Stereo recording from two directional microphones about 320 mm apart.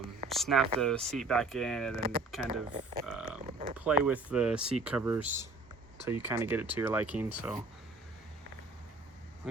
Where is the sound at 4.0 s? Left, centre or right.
Centre.